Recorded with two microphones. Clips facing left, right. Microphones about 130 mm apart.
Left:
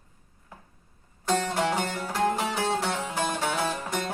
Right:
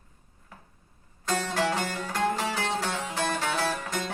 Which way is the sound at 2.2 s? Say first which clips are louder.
Left 2 dB; 15° left (ahead or behind).